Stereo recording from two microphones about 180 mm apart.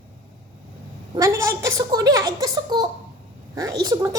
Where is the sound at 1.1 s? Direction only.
15° right (ahead or behind).